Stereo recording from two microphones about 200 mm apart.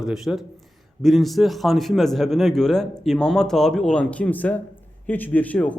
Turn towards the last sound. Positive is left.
turn(degrees=5)  # may be behind; listen again after turning